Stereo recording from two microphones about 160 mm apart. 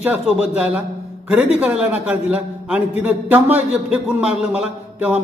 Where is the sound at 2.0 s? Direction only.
5° right (ahead or behind).